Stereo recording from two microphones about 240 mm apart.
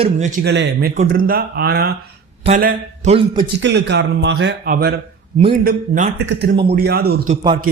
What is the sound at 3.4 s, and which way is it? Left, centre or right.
A man's voice, right.